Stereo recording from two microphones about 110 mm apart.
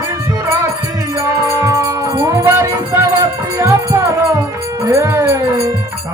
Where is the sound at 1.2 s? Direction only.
25° right (ahead or behind).